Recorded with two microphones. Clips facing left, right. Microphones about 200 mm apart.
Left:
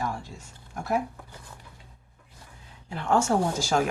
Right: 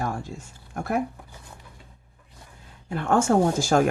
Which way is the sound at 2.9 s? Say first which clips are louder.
Right 3 dB; 50° right (ahead or behind).